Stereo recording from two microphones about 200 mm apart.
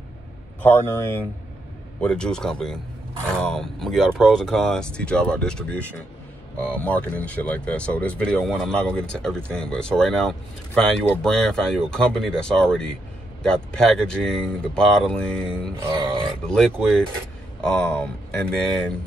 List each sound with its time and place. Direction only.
0.6 s speech: 10° left (ahead or behind)
15.8 s a sound: 25° right (ahead or behind)
16.4 s speech: 5° left (ahead or behind)